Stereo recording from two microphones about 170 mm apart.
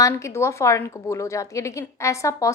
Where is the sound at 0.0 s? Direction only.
15° left (ahead or behind).